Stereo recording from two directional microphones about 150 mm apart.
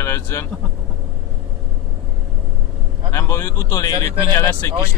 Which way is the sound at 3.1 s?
20° left (ahead or behind).